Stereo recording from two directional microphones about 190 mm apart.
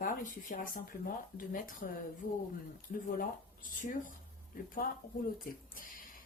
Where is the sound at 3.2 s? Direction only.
45° left (ahead or behind).